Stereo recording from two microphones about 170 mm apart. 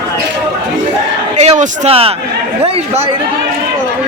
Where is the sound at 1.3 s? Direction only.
40° right (ahead or behind).